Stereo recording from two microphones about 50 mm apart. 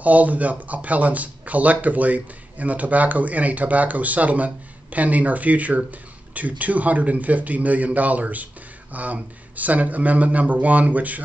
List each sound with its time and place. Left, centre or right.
0.0 s speech: right